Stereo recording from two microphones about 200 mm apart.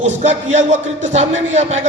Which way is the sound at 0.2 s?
35° right (ahead or behind).